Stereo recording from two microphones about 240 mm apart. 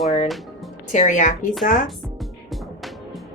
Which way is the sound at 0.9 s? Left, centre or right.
Left.